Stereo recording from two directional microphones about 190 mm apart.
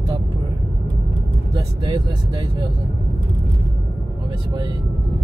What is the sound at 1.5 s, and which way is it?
Speech, 25° right (ahead or behind).